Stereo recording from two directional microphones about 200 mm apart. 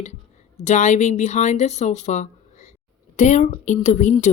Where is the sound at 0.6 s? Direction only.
35° left (ahead or behind).